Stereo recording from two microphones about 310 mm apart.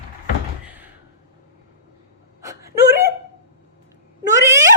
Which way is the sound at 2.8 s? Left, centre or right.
Right.